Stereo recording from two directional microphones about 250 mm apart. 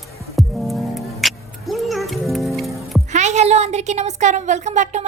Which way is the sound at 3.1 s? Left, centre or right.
Right.